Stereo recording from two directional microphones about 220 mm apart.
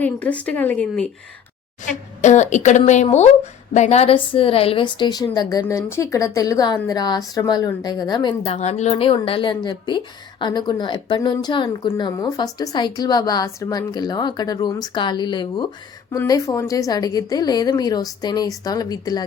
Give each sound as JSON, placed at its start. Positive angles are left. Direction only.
{"t": 0.0, "sound": "a woman's voice", "side_deg": 5}
{"t": 2.2, "sound": "a woman's voice", "side_deg": 30}